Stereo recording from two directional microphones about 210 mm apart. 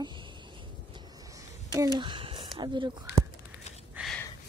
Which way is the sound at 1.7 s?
15° right (ahead or behind).